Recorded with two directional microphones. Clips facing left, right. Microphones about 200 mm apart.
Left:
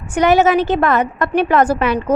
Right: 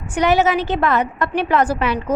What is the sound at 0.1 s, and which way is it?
A woman's voice, 50° left (ahead or behind).